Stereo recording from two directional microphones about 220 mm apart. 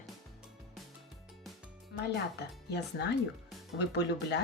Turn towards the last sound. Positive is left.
turn(degrees=50)  # may be behind; listen again after turning